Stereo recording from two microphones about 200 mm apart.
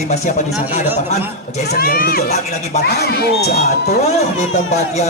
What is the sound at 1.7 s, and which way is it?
Speech, 45° left (ahead or behind).